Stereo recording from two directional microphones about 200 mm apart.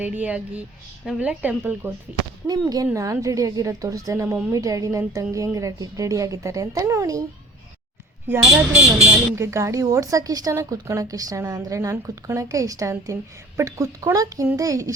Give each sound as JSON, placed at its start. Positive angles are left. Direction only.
{"t": 0.0, "sound": "a woman's voice", "side_deg": -5}
{"t": 8.3, "sound": "a woman's voice", "side_deg": -5}